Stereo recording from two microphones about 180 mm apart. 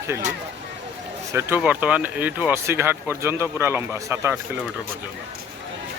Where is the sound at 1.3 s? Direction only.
15° right (ahead or behind).